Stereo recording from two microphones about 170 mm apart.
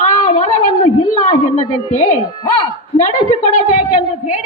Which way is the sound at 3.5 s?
50° left (ahead or behind).